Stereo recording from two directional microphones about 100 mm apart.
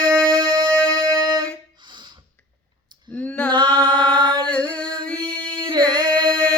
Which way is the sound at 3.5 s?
50° right (ahead or behind).